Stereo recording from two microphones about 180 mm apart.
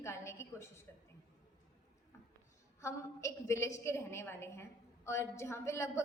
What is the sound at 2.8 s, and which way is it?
A woman's voice, 15° left (ahead or behind).